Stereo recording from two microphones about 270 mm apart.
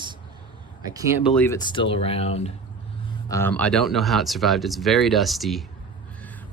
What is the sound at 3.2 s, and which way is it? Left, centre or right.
Speech, centre.